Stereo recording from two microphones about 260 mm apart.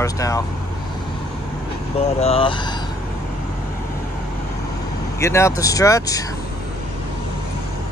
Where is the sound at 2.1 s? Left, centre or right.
Left.